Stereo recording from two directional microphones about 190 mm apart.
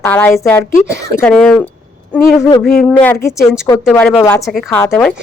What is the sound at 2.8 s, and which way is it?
A woman's voice, 5° left (ahead or behind).